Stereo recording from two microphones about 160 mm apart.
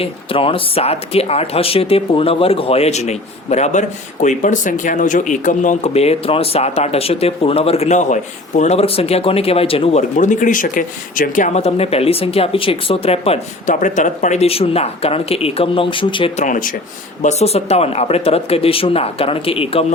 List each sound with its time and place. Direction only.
0.0 s speech: 35° left (ahead or behind)
10.2 s speech: 50° left (ahead or behind); by 16.3 s 30° left (ahead or behind)
16.4 s speech: 55° left (ahead or behind)
17.2 s speech: 40° left (ahead or behind)